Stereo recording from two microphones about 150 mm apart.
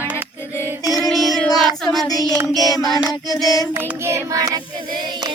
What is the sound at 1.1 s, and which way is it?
Child singing, centre (ahead or behind).